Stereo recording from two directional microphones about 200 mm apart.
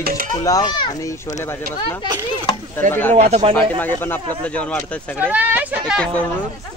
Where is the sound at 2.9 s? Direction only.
10° left (ahead or behind).